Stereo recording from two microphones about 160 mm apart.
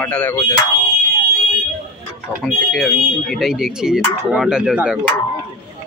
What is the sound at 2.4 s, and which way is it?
Speech, centre (ahead or behind).